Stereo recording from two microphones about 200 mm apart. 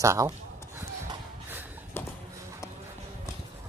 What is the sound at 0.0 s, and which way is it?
Speech, 15° right (ahead or behind).